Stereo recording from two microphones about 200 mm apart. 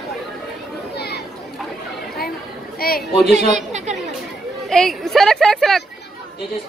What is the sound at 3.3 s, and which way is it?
Chatter, 35° right (ahead or behind).